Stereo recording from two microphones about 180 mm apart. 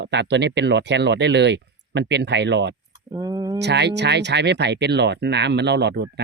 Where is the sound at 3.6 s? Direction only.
70° right (ahead or behind).